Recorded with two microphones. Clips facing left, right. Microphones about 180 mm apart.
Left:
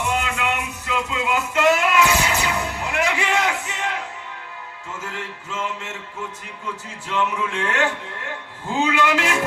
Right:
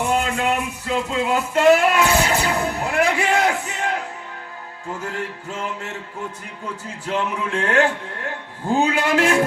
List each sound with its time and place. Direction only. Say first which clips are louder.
0.0 s music: right 3 dB; 35° right (ahead or behind)
5.0 s music: right 3 dB; 35° right (ahead or behind)
7.1 s music: right 1 dB; 40° right (ahead or behind)